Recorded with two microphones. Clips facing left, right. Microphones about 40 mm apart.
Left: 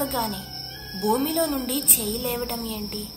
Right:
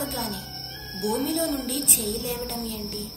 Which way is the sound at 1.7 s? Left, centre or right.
Left.